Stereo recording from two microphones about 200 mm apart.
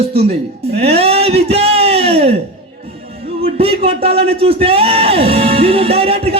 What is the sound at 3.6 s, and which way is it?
Music, 30° right (ahead or behind).